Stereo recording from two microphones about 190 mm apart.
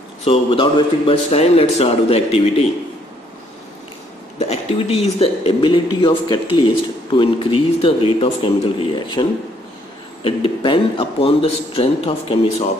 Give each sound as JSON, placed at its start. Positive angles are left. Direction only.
{"t": 0.2, "sound": "a man's voice", "side_deg": 30}
{"t": 4.4, "sound": "a man's voice", "side_deg": 30}
{"t": 10.2, "sound": "a man's voice", "side_deg": 30}